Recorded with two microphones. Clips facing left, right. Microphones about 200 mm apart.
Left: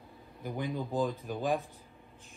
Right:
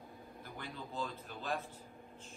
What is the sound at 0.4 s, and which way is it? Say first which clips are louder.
Speech: left 13 dB; 15° left (ahead or behind).